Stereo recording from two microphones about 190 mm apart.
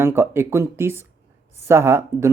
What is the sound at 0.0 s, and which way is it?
Speech, 10° right (ahead or behind).